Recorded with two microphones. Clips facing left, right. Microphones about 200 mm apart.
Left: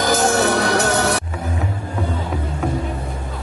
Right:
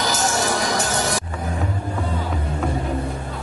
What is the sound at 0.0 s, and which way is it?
Music, 55° left (ahead or behind).